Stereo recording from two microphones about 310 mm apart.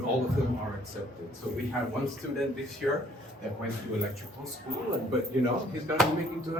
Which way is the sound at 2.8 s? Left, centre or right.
Centre.